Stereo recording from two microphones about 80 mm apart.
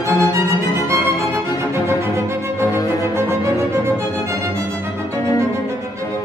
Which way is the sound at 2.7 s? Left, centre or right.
Left.